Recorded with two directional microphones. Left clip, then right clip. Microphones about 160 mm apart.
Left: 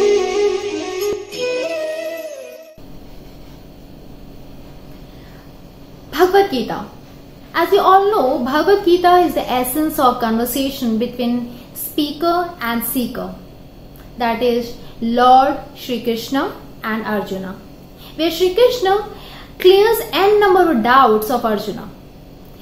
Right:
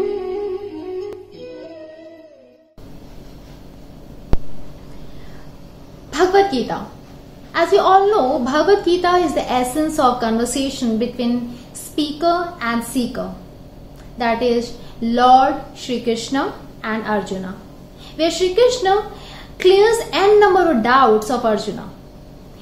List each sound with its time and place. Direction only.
1.4 s music: 35° left (ahead or behind)
6.1 s a woman's voice: centre (ahead or behind)